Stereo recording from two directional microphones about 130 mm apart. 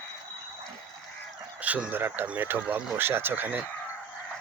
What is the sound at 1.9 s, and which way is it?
Speech, 15° right (ahead or behind).